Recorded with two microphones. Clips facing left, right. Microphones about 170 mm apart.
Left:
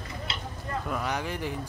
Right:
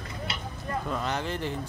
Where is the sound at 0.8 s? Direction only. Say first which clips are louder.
Even; 10° left (ahead or behind).